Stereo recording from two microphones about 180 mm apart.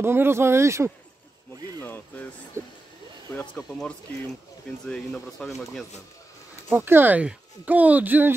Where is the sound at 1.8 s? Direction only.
10° left (ahead or behind).